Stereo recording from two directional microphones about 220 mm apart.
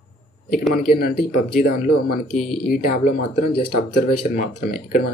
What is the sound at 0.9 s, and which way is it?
Speech, 45° left (ahead or behind).